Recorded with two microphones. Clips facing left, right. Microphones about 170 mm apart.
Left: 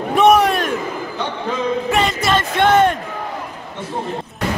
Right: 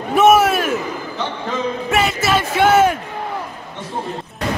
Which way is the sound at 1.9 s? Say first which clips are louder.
Right 2 dB; 5° right (ahead or behind).